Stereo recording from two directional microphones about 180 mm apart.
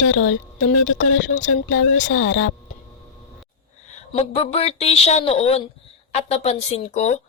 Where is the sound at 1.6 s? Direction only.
90° left.